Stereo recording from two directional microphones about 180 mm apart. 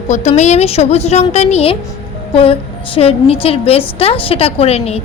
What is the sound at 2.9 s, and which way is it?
Speech, 30° left (ahead or behind).